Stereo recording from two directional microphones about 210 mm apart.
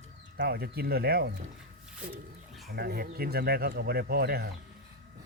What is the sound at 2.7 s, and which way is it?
Speech, 45° right (ahead or behind).